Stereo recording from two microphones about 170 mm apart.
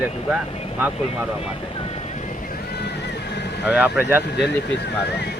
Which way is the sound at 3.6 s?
10° right (ahead or behind).